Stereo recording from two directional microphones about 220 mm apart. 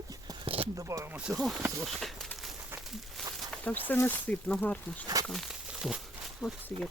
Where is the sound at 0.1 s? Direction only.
20° right (ahead or behind).